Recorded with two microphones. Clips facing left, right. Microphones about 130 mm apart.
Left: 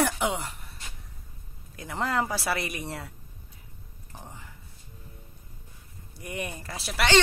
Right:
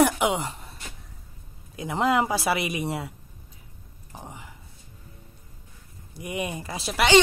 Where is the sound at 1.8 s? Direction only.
20° right (ahead or behind).